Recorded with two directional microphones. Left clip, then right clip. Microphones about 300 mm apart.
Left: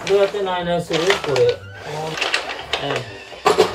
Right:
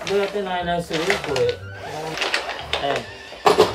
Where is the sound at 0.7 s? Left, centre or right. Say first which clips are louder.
Left 5 dB; centre.